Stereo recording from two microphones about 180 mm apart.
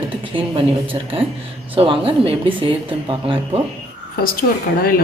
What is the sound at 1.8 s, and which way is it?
Speech, 30° right (ahead or behind).